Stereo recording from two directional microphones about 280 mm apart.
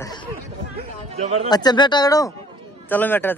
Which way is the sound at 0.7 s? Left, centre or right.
Right.